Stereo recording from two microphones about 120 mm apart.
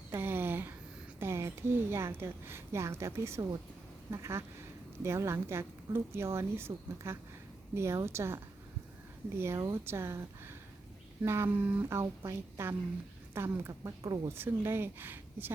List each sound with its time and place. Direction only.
0.1 s a sound: 20° right (ahead or behind)
1.2 s a woman's voice: 20° right (ahead or behind)
9.4 s a woman's voice: 25° right (ahead or behind)